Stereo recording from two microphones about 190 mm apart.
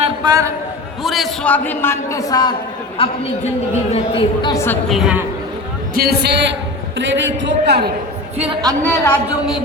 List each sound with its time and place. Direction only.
0.0 s a sound: 20° right (ahead or behind)
1.0 s a man's voice: centre (ahead or behind); by 4.5 s 30° left (ahead or behind)
4.5 s a man's voice: 15° left (ahead or behind)
4.9 s a woman's voice: 5° right (ahead or behind)
5.9 s a man's voice: 55° right (ahead or behind)
7.0 s a man's voice: 75° right (ahead or behind)
8.4 s a man's voice: 30° right (ahead or behind)
8.8 s a man's voice: 10° left (ahead or behind)